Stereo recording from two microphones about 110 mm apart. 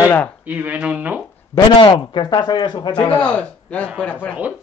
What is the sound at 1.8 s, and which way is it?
Speech, 45° left (ahead or behind).